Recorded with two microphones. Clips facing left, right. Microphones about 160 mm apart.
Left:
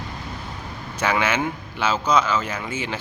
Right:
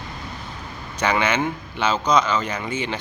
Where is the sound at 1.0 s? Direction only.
5° left (ahead or behind).